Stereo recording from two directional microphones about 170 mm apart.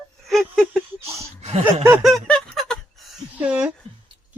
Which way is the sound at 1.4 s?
40° right (ahead or behind).